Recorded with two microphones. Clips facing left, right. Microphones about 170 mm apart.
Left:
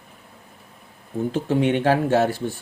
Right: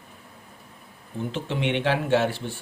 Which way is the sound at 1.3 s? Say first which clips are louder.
Left 6 dB; 45° left (ahead or behind).